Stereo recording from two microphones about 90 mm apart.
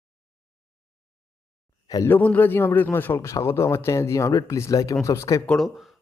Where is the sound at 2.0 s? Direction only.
20° left (ahead or behind).